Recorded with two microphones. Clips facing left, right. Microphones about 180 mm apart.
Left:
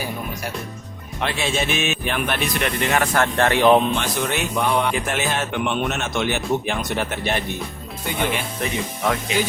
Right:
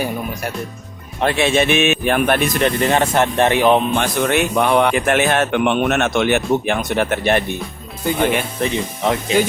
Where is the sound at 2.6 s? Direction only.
35° right (ahead or behind); by 3.7 s 15° right (ahead or behind).